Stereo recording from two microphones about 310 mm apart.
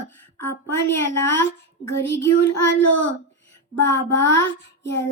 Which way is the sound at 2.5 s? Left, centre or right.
Left.